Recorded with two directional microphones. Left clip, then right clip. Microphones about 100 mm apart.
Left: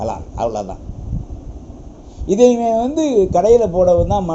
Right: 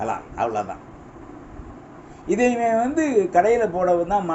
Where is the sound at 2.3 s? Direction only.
25° left (ahead or behind).